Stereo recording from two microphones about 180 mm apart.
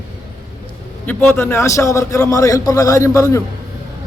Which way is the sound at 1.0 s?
10° left (ahead or behind).